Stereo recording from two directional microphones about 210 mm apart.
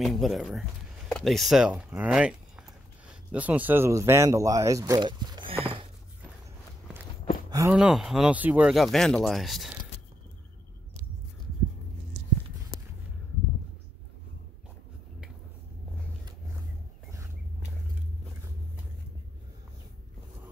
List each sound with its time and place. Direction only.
0.0 s speech: centre (ahead or behind); by 5.6 s 20° right (ahead or behind)
7.4 s a sound: 15° right (ahead or behind)
7.7 s speech: 5° right (ahead or behind)